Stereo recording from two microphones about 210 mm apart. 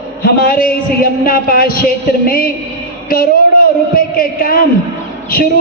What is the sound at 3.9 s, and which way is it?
Speech, 45° left (ahead or behind).